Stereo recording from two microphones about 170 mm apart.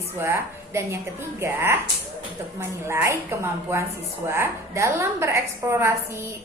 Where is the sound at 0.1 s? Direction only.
15° right (ahead or behind).